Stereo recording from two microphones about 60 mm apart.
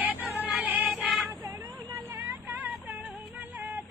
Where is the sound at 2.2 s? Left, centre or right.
Right.